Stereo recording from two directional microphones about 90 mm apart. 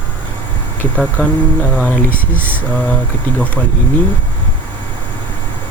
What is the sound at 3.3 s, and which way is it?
Speech, 20° left (ahead or behind).